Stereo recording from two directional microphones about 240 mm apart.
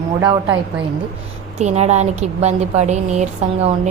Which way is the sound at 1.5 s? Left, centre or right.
Right.